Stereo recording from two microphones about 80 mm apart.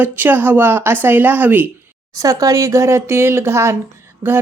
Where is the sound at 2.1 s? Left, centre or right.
Right.